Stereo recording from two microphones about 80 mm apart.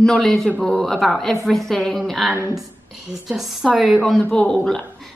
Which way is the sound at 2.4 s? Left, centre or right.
Right.